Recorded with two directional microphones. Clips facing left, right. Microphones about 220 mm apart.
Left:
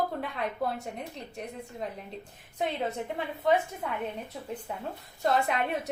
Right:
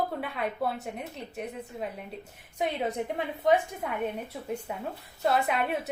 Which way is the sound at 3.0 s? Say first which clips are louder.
Right 3 dB; 15° right (ahead or behind).